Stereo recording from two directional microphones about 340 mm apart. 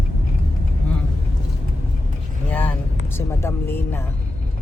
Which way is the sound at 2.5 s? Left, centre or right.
Centre.